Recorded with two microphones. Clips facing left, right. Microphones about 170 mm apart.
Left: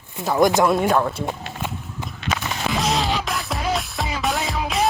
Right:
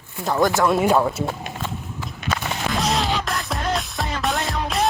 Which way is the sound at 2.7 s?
Centre (ahead or behind).